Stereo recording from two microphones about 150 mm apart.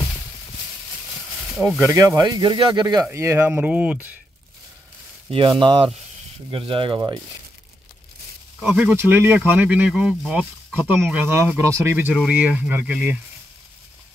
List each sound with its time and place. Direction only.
1.6 s speech: 15° right (ahead or behind)
3.1 s speech: 15° right (ahead or behind)
5.3 s speech: 35° right (ahead or behind)
8.5 s speech: 10° right (ahead or behind)